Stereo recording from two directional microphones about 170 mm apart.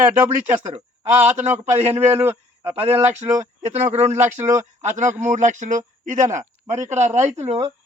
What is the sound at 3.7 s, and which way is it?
Speech, 40° right (ahead or behind).